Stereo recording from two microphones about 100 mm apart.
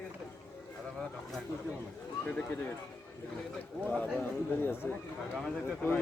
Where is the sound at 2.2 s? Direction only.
15° left (ahead or behind).